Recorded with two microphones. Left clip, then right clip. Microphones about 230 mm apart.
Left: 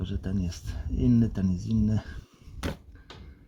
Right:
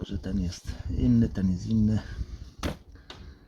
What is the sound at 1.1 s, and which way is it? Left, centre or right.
Speech, left.